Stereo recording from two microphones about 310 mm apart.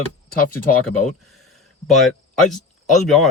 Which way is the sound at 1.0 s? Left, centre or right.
Centre.